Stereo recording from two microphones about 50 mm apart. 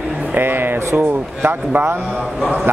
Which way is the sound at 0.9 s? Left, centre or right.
Right.